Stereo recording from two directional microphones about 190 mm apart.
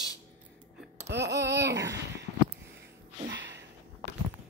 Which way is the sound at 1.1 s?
65° right (ahead or behind).